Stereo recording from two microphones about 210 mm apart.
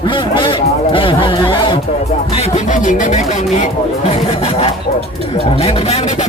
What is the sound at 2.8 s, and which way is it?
Speech, 35° left (ahead or behind).